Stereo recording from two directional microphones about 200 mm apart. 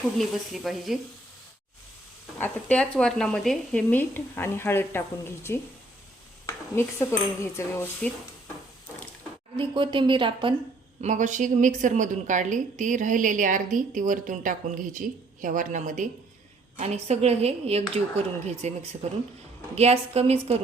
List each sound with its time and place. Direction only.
0.2 s speech: centre (ahead or behind)
2.4 s speech: 5° left (ahead or behind)
9.6 s a woman's voice: 25° right (ahead or behind)
11.0 s a woman's voice: 40° right (ahead or behind)